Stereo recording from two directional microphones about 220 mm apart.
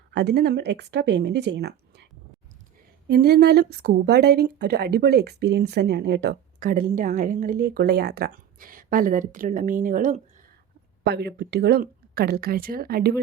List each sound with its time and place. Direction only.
0.1 s a woman's voice: 50° right (ahead or behind)
3.1 s a woman's voice: 45° right (ahead or behind)
11.0 s a woman's voice: 50° right (ahead or behind)